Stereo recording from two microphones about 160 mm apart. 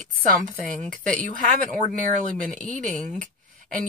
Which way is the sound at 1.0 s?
55° right (ahead or behind).